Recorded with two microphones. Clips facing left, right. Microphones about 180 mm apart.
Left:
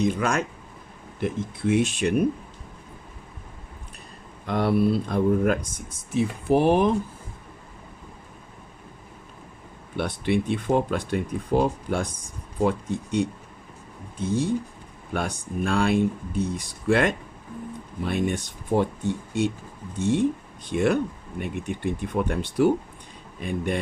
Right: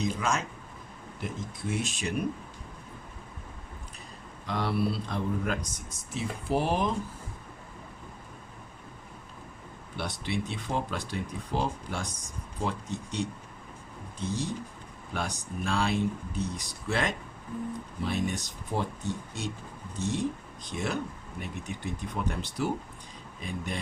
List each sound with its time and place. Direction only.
0.0 s speech: 60° left (ahead or behind)
4.4 s speech: 55° left (ahead or behind)
10.0 s speech: 55° left (ahead or behind)